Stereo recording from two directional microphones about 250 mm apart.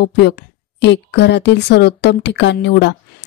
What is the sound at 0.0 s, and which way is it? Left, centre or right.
A woman's voice, left.